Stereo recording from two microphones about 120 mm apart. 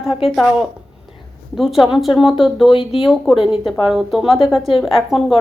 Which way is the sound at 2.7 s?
50° left (ahead or behind).